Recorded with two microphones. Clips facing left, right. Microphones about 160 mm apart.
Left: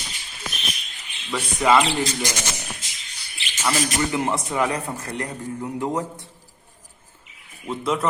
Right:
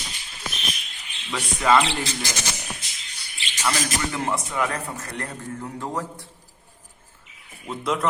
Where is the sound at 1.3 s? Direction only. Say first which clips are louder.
Left 1 dB; 10° left (ahead or behind).